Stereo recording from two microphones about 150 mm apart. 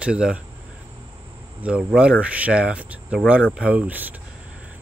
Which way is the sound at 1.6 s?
5° right (ahead or behind).